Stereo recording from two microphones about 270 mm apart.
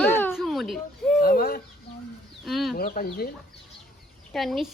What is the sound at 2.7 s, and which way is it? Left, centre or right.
Speech, left.